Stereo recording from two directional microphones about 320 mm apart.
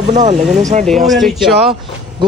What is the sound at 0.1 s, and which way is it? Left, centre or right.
Speech, right.